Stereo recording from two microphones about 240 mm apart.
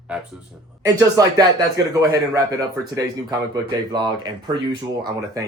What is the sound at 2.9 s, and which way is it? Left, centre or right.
Speech, centre.